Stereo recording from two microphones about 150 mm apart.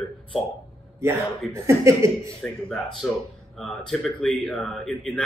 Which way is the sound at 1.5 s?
20° right (ahead or behind).